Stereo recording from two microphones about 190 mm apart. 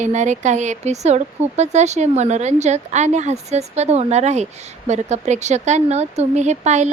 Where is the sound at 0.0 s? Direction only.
40° right (ahead or behind).